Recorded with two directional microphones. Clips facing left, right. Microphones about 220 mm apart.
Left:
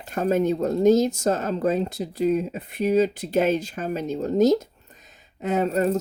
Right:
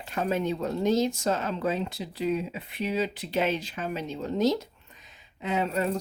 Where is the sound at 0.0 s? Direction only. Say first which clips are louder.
Left 6 dB; 45° left (ahead or behind).